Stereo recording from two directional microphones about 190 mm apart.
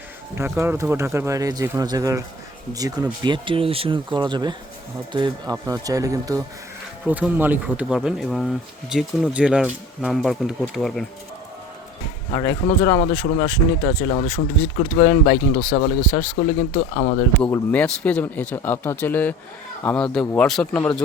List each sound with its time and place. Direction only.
0.3 s speech: 15° right (ahead or behind)
7.0 s speech: 5° right (ahead or behind)
12.3 s speech: 20° left (ahead or behind)
13.0 s speech: 30° left (ahead or behind); by 16.4 s 10° left (ahead or behind)
16.7 s speech: 35° left (ahead or behind)
17.4 s speech: 10° left (ahead or behind)